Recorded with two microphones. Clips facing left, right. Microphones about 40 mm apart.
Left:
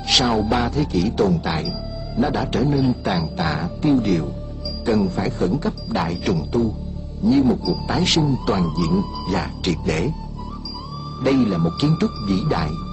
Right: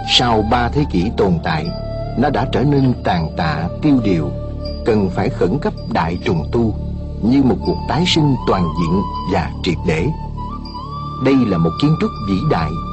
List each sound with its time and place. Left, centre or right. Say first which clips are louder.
0.1 s speech: right 4 dB; right
11.1 s speech: right 4 dB; right